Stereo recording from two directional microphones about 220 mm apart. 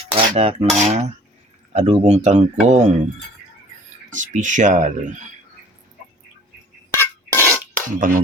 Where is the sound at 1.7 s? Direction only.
30° right (ahead or behind).